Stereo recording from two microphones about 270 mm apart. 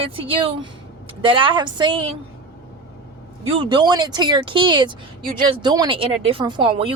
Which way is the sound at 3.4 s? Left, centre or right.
Centre.